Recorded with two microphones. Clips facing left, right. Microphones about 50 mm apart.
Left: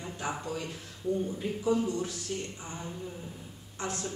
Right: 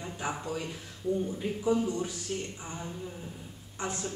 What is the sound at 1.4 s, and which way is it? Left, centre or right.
Speech, centre.